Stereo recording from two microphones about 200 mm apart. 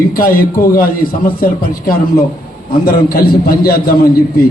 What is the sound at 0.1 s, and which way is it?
A man's voice, 45° left (ahead or behind).